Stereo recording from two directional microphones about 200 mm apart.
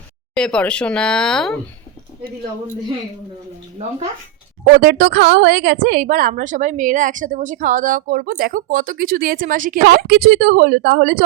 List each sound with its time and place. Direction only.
0.3 s speech: 5° left (ahead or behind)
4.7 s a woman's voice: 50° right (ahead or behind)